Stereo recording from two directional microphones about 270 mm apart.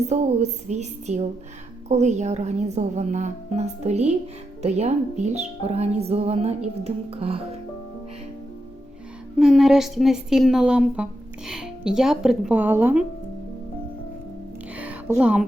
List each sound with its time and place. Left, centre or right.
0.0 s a woman's voice: right
9.4 s a woman's voice: centre
14.8 s music: centre